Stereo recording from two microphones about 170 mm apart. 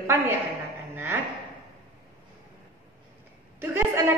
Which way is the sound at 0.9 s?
15° right (ahead or behind).